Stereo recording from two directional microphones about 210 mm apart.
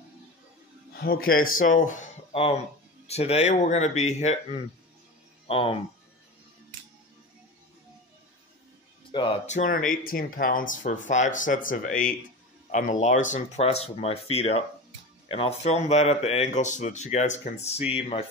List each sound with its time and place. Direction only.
0.9 s a man's voice: 45° left (ahead or behind)
5.5 s speech: 25° left (ahead or behind)
9.1 s a man's voice: 25° left (ahead or behind)